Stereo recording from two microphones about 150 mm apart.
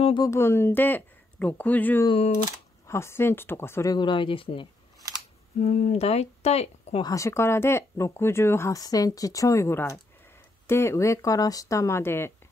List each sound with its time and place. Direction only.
0.2 s speech: 15° left (ahead or behind)
2.0 s speech: 40° left (ahead or behind)
2.9 s speech: 15° left (ahead or behind); by 4.6 s 35° left (ahead or behind)
5.6 s speech: 50° left (ahead or behind)
7.0 s speech: 20° left (ahead or behind)